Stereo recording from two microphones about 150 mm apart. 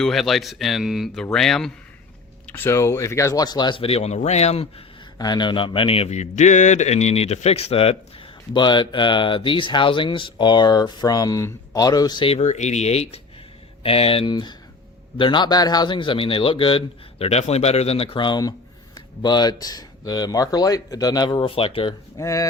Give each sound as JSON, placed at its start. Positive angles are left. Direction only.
{"t": 0.0, "sound": "speech", "side_deg": 0}
{"t": 2.5, "sound": "speech", "side_deg": 15}
{"t": 5.1, "sound": "speech", "side_deg": 30}
{"t": 8.5, "sound": "speech", "side_deg": 30}
{"t": 12.4, "sound": "speech", "side_deg": 50}
{"t": 22.2, "sound": "speech", "side_deg": 20}